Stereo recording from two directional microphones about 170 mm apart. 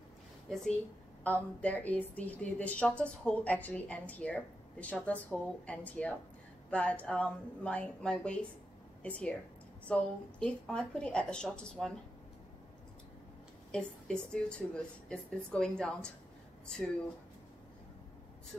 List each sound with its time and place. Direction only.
1.2 s a woman's voice: 10° left (ahead or behind)
9.8 s speech: 5° left (ahead or behind)
13.7 s speech: 5° left (ahead or behind)
18.5 s speech: centre (ahead or behind)